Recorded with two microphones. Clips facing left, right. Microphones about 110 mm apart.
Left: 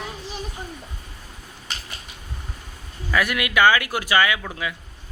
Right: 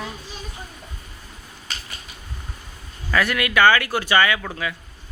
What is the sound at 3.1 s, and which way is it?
Speech, 10° left (ahead or behind).